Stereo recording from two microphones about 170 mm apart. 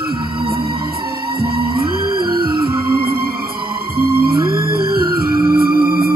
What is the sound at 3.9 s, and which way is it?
Music, 60° right (ahead or behind).